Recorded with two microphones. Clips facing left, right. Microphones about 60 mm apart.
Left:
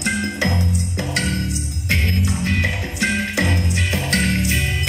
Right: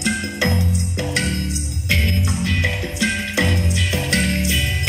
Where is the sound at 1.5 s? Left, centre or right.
Left.